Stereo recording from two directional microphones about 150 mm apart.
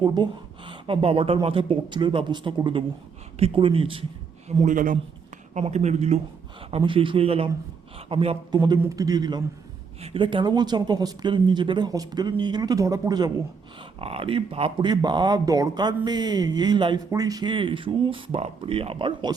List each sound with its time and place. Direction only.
0.0 s speech: 30° right (ahead or behind)
4.6 s speech: 60° right (ahead or behind)
5.5 s speech: 50° right (ahead or behind)
8.5 s speech: 25° right (ahead or behind)
14.0 s speech: 40° right (ahead or behind)